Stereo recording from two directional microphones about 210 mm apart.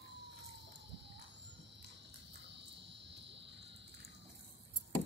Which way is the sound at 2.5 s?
55° right (ahead or behind).